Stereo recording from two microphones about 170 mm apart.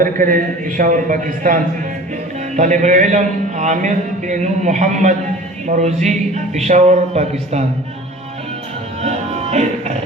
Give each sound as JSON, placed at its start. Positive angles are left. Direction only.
{"t": 0.0, "sound": "a man's voice", "side_deg": -55}
{"t": 9.0, "sound": "music", "side_deg": -40}